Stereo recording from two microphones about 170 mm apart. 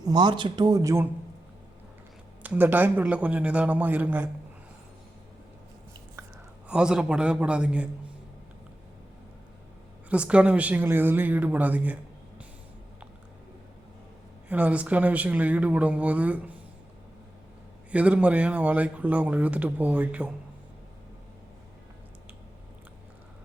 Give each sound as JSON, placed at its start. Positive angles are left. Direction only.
{"t": 0.0, "sound": "a man's voice", "side_deg": -25}
{"t": 2.4, "sound": "a man's voice", "side_deg": -10}
{"t": 6.7, "sound": "a man's voice", "side_deg": -5}
{"t": 10.1, "sound": "a man's voice", "side_deg": -5}
{"t": 14.5, "sound": "a man's voice", "side_deg": -10}
{"t": 17.9, "sound": "a man's voice", "side_deg": -10}